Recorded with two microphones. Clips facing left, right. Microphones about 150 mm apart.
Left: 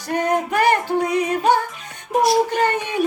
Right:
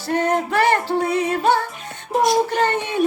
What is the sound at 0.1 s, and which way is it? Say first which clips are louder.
Speech: right 1 dB; 15° left (ahead or behind).